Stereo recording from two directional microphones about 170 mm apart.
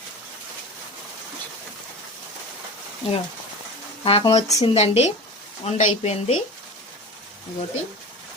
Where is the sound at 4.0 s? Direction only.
35° left (ahead or behind).